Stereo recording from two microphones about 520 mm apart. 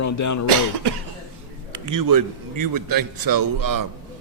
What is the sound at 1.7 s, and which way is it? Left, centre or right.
A man's voice, right.